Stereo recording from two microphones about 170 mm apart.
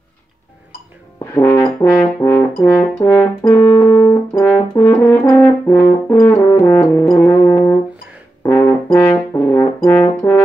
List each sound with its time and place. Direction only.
1.2 s brass instrument: 15° left (ahead or behind)
5.3 s french horn: 15° left (ahead or behind)
6.5 s brass instrument: 15° left (ahead or behind)